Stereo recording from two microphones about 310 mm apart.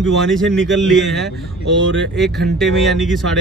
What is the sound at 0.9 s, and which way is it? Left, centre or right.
Speech, centre.